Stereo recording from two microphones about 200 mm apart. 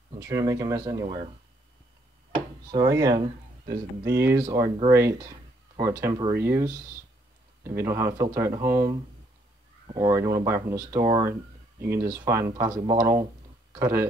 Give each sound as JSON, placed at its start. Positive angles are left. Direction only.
{"t": 0.1, "sound": "speech", "side_deg": -20}
{"t": 1.0, "sound": "speech", "side_deg": -30}
{"t": 2.3, "sound": "speech", "side_deg": -20}